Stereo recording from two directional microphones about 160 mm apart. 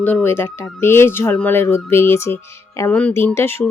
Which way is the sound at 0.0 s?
10° left (ahead or behind).